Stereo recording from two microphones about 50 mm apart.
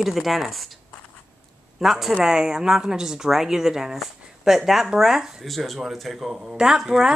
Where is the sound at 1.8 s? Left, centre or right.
Centre.